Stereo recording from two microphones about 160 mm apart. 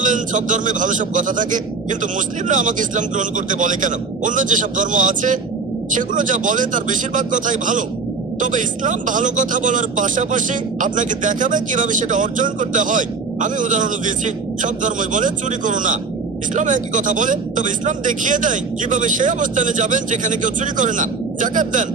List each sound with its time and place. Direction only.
0.0 s speech: 55° right (ahead or behind)